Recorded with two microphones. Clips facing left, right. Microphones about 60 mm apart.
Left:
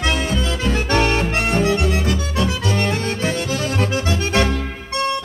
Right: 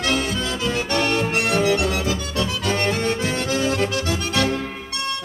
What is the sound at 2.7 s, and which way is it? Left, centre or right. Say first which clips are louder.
Music: even; right.